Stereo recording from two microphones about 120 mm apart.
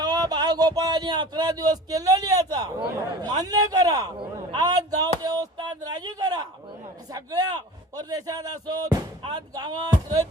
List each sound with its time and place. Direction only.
0.0 s speech: 35° right (ahead or behind)